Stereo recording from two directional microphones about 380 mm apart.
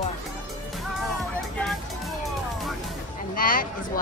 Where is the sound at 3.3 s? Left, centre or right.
Left.